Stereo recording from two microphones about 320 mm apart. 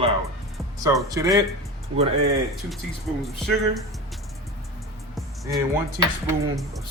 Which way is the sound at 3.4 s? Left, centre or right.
Centre.